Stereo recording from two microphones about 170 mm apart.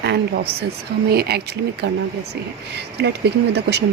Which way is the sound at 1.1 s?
65° right (ahead or behind).